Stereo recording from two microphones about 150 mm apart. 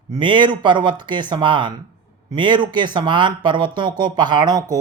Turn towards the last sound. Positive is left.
turn(degrees=-25)  # may be behind; listen again after turning